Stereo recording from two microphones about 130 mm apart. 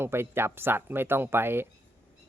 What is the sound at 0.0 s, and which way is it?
Speech, 20° right (ahead or behind).